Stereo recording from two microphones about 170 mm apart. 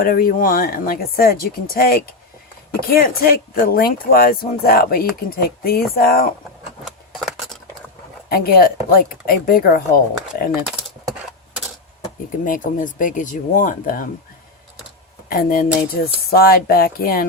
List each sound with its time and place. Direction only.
0.0 s speech: 55° left (ahead or behind)
6.8 s a sound: centre (ahead or behind)
8.3 s speech: 60° left (ahead or behind)
12.5 s speech: 50° left (ahead or behind)
15.3 s speech: 60° left (ahead or behind)